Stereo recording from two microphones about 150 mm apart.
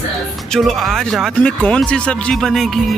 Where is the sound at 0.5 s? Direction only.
Centre (ahead or behind).